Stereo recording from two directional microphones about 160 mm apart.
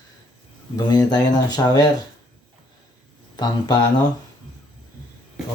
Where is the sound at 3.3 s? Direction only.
25° left (ahead or behind).